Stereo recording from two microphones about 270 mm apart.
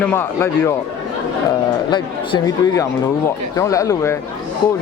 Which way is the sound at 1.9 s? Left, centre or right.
Centre.